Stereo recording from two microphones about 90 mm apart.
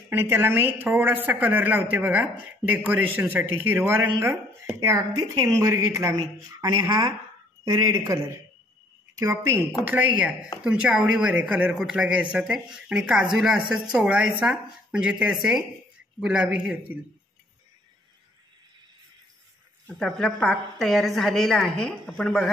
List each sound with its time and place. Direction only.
0.1 s a woman's voice: 25° right (ahead or behind)
4.7 s a woman's voice: 40° right (ahead or behind)
9.1 s speech: 35° right (ahead or behind)
9.8 s a man's voice: 20° right (ahead or behind)
19.9 s a woman's voice: centre (ahead or behind)